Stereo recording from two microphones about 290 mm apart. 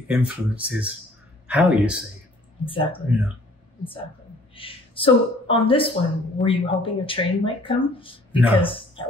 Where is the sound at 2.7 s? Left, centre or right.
Centre.